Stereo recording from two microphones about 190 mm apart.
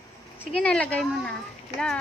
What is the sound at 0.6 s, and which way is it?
Speech, 5° left (ahead or behind).